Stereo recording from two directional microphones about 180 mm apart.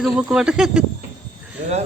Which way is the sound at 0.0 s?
5° right (ahead or behind).